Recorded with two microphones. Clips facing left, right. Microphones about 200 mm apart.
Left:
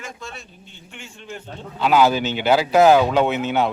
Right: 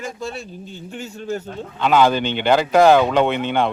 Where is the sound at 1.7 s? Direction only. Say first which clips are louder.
Right 1 dB; 5° left (ahead or behind).